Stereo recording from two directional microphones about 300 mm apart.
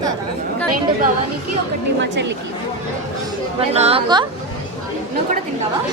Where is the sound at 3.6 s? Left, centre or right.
Centre.